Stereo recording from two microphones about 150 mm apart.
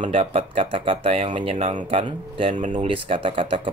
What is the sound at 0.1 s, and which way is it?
Speech, 40° right (ahead or behind).